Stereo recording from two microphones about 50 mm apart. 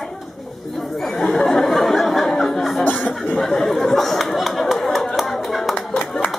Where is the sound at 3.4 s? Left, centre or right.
Centre.